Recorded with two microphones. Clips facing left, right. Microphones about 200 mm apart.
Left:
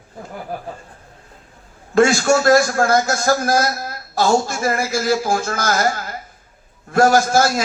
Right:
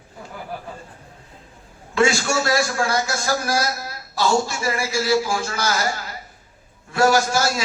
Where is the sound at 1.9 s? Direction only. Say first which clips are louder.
Left 5 dB; 50° left (ahead or behind).